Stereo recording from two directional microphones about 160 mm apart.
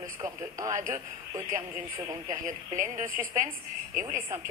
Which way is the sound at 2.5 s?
55° right (ahead or behind).